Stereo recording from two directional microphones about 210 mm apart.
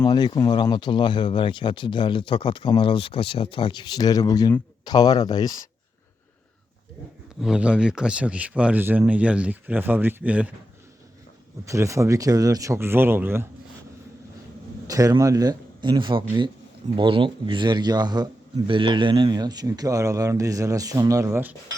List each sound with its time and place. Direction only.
0.0 s speech: 20° left (ahead or behind)
7.4 s speech: 5° right (ahead or behind)
11.6 s speech: 15° right (ahead or behind)
14.8 s a man's voice: 15° right (ahead or behind)